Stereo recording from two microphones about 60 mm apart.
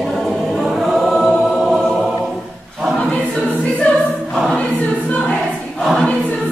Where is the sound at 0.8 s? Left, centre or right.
Centre.